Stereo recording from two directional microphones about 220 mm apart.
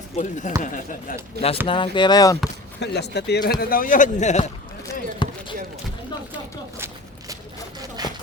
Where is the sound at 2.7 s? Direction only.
50° left (ahead or behind); by 4.4 s 30° left (ahead or behind).